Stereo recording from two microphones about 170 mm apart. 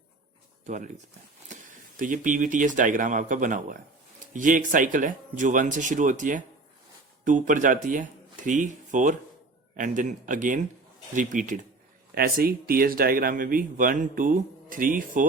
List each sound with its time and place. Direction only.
0.6 s speech: 45° right (ahead or behind)
2.0 s speech: 50° right (ahead or behind)
12.1 s speech: 60° right (ahead or behind)